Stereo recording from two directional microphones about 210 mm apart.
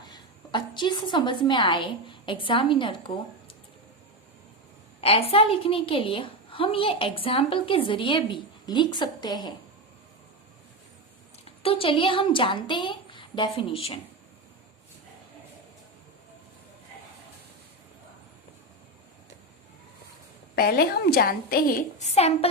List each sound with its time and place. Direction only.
0.0 s a woman's voice: 20° left (ahead or behind)
4.9 s a woman's voice: 30° left (ahead or behind)
11.4 s a woman's voice: 25° left (ahead or behind)
20.6 s a woman's voice: 45° left (ahead or behind); by 22.4 s 30° left (ahead or behind)